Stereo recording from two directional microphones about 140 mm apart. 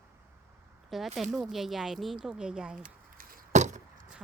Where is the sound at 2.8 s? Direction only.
75° right (ahead or behind).